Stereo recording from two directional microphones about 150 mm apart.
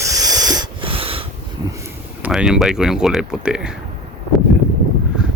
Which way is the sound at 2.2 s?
5° right (ahead or behind).